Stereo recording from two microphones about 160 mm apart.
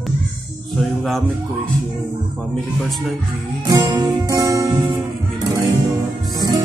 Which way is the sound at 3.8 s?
15° right (ahead or behind).